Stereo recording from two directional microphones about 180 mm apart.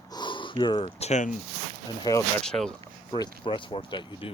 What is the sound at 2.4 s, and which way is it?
Speech, 5° left (ahead or behind).